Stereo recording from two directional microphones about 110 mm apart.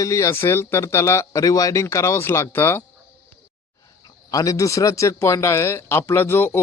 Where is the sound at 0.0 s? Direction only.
25° left (ahead or behind).